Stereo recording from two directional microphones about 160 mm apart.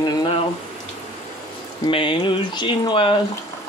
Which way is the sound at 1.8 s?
30° left (ahead or behind).